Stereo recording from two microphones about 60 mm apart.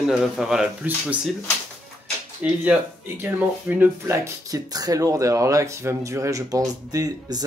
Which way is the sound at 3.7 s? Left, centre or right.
Right.